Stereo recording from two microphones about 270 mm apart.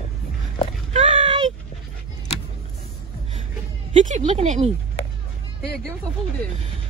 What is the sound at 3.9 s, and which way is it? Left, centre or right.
Speech, right.